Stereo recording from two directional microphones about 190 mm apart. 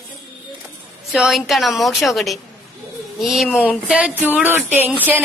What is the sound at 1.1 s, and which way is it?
A woman's voice, 5° right (ahead or behind).